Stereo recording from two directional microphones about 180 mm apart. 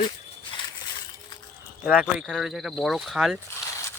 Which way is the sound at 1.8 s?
5° right (ahead or behind).